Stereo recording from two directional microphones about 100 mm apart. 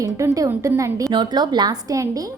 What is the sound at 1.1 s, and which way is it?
A woman's voice, 45° right (ahead or behind).